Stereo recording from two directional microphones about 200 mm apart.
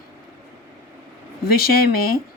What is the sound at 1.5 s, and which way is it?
Speech, 50° left (ahead or behind).